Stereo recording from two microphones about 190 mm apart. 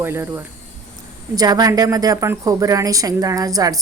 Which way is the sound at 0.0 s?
10° right (ahead or behind).